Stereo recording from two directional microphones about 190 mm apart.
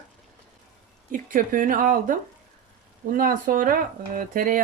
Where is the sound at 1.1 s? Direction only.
45° right (ahead or behind).